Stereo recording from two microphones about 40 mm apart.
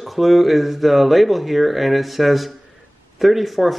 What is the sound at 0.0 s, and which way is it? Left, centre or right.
A man's voice, centre.